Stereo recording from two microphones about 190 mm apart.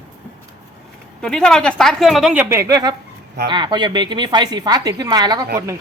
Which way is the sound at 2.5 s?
20° right (ahead or behind).